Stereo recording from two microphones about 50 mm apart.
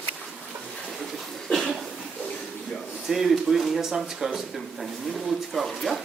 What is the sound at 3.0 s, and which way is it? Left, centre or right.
Speech, centre.